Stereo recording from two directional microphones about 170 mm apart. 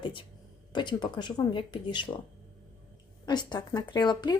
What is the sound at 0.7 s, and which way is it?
Speech, 25° left (ahead or behind).